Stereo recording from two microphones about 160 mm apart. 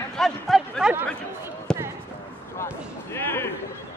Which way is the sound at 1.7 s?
5° left (ahead or behind).